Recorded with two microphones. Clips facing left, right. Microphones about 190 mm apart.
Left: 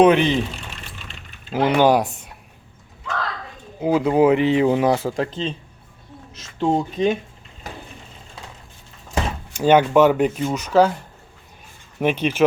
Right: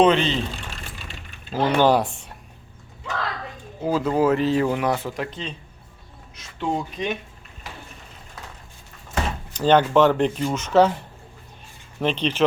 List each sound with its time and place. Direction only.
0.0 s speech: 10° left (ahead or behind)
1.5 s speech: 15° left (ahead or behind)
3.8 s speech: 15° left (ahead or behind)
6.6 s speech: 25° left (ahead or behind)
9.6 s speech: 10° left (ahead or behind)
11.9 s speech: 10° left (ahead or behind)